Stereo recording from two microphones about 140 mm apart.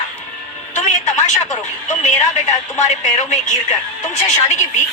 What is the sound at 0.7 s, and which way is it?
A woman's voice, 55° left (ahead or behind).